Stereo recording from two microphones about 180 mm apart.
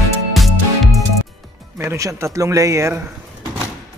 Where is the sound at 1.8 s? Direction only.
15° right (ahead or behind).